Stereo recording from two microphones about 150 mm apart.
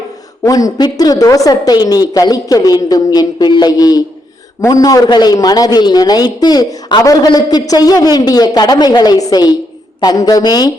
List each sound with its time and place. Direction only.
0.4 s a man's voice: 25° left (ahead or behind)